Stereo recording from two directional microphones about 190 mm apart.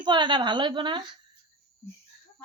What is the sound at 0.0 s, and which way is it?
Speech, 25° right (ahead or behind).